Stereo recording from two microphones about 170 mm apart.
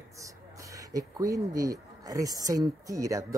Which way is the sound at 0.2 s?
20° right (ahead or behind).